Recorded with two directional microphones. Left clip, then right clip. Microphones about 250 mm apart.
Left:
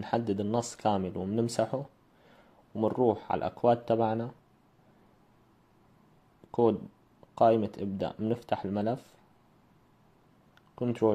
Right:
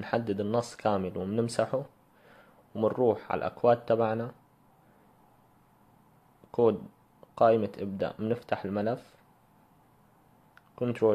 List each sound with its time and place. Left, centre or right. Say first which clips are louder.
0.0 s speech: even; centre
6.5 s speech: right 1 dB; centre
10.5 s a sound: right 1 dB; centre